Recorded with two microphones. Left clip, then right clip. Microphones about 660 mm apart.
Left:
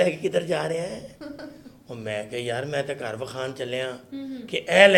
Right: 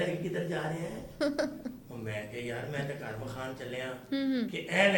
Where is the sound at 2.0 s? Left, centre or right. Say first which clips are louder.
Left 9 dB; left.